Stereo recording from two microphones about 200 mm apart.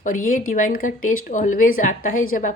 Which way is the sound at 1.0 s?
90° left.